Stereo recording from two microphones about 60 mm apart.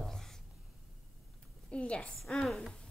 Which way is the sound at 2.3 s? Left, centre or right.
Centre.